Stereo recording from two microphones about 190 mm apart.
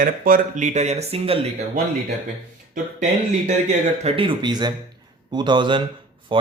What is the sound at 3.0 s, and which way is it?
Speech, 40° right (ahead or behind).